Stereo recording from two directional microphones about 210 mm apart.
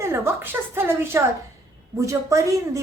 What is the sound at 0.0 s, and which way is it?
A woman's voice, 10° right (ahead or behind).